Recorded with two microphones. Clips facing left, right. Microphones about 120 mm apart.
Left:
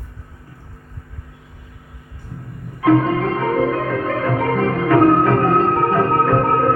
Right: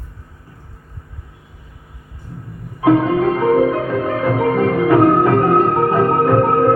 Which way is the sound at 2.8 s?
20° right (ahead or behind).